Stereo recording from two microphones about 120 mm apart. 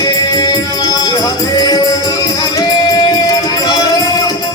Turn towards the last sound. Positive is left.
turn(degrees=30)  # may be behind; listen again after turning